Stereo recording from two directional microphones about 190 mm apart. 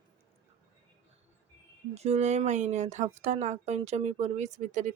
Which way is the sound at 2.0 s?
35° right (ahead or behind).